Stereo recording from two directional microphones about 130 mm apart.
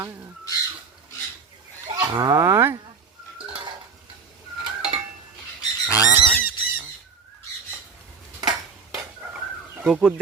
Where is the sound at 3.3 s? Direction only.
40° right (ahead or behind).